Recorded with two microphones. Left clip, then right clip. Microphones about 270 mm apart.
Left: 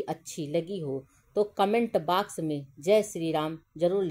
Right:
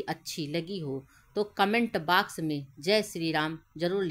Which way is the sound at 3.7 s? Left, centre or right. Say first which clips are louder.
Left 6 dB; right.